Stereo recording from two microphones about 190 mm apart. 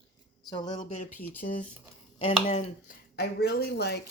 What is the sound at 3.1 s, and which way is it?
Speech, 55° left (ahead or behind).